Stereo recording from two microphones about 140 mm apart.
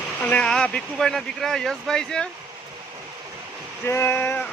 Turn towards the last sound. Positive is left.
turn(degrees=15)  # may be behind; listen again after turning